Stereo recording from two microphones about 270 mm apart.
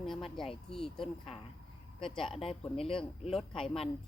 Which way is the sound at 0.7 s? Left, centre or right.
Centre.